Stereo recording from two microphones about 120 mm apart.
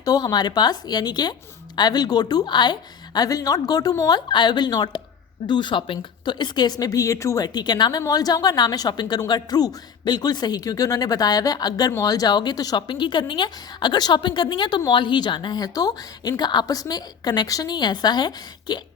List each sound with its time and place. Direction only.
0.0 s speech: 35° left (ahead or behind)